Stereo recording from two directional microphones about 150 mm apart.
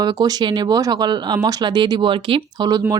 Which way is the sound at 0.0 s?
25° right (ahead or behind).